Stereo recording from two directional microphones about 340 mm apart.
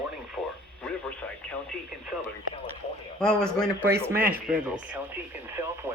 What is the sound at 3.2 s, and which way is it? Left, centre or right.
Speech, centre.